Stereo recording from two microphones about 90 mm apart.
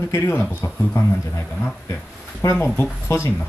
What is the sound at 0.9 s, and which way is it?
Speech, 35° left (ahead or behind).